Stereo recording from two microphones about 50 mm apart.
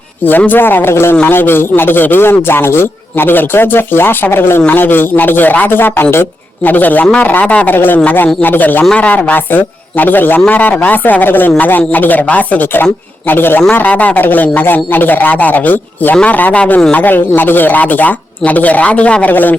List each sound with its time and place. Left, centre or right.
0.3 s speech: left
6.7 s speech: left
7.7 s speech: left
12.7 s a man's voice: left
13.6 s speech: left
19.3 s speech: left